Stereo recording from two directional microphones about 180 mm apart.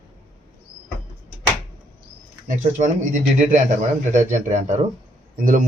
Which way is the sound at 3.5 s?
45° right (ahead or behind).